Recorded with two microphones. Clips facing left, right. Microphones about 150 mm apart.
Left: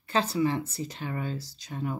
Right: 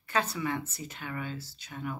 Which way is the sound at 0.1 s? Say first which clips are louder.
Left 5 dB; 30° left (ahead or behind).